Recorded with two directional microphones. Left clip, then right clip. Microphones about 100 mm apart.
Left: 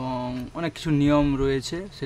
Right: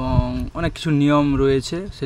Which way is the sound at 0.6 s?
40° right (ahead or behind).